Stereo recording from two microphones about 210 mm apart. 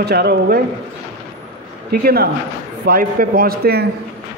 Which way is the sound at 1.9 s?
45° right (ahead or behind).